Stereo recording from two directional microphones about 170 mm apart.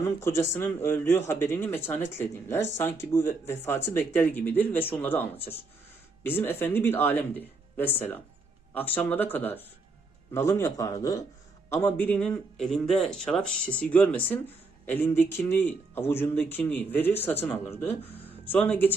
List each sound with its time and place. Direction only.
0.2 s a man's voice: 15° left (ahead or behind)